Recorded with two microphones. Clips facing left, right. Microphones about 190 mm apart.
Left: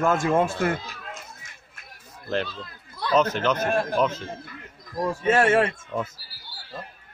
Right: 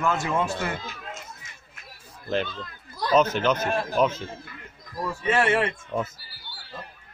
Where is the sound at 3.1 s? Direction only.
10° right (ahead or behind).